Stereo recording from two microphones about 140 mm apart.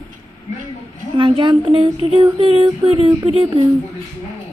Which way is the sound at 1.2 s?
35° right (ahead or behind).